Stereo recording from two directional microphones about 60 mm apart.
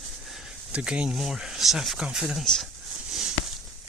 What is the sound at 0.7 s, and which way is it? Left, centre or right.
Speech, centre.